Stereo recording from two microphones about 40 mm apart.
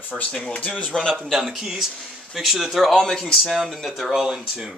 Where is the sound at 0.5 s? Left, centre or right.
Left.